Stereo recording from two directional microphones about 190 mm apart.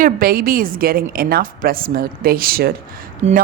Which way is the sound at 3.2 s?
35° right (ahead or behind).